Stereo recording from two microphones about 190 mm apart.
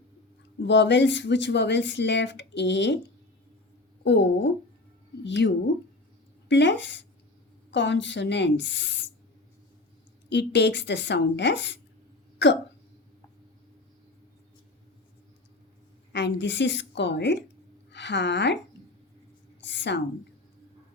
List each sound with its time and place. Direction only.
0.6 s speech: 70° left (ahead or behind)
4.0 s speech: 65° left (ahead or behind)
6.5 s speech: 70° left (ahead or behind)
10.2 s speech: 65° left (ahead or behind)
16.1 s a woman's voice: 65° left (ahead or behind)
19.6 s a sound: 70° left (ahead or behind)